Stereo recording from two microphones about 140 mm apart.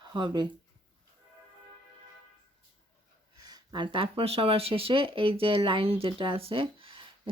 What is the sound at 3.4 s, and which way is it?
Speech, 30° right (ahead or behind).